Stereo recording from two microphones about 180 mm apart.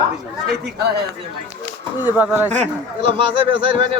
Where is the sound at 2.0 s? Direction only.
10° right (ahead or behind).